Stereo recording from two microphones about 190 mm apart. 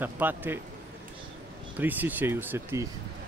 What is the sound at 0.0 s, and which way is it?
Speech, 10° right (ahead or behind).